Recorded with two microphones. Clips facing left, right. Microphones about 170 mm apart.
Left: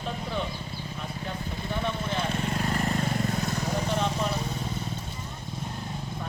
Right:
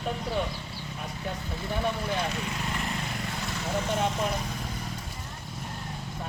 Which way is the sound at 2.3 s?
50° left (ahead or behind).